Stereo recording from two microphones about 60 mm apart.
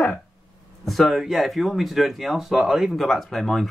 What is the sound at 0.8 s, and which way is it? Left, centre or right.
Speech, centre.